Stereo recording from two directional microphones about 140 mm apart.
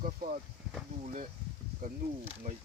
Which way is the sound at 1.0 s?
70° right (ahead or behind).